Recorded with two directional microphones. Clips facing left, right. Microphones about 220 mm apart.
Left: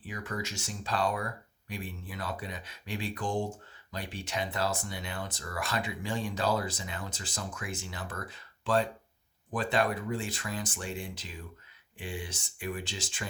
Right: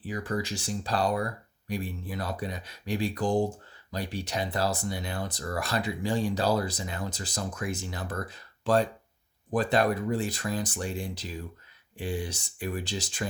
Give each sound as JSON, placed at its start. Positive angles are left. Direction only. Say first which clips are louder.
{"t": 0.0, "sound": "speech", "louder": "right 6 dB", "side_deg": -35}